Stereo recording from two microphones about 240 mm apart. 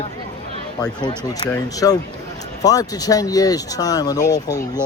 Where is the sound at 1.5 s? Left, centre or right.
Centre.